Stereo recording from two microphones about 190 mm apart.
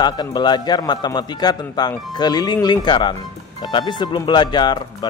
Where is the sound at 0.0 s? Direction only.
20° left (ahead or behind).